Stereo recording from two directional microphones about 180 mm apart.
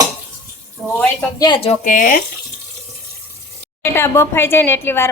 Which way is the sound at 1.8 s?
45° left (ahead or behind).